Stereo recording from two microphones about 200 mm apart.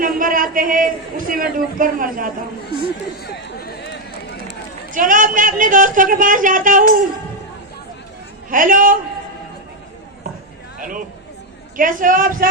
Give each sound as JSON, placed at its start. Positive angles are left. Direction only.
{"t": 0.0, "sound": "a man's voice", "side_deg": -45}
{"t": 3.2, "sound": "run", "side_deg": 55}
{"t": 4.9, "sound": "speech", "side_deg": -40}
{"t": 8.4, "sound": "a man's voice", "side_deg": -45}
{"t": 10.8, "sound": "a sound", "side_deg": -45}
{"t": 11.8, "sound": "a man's voice", "side_deg": -45}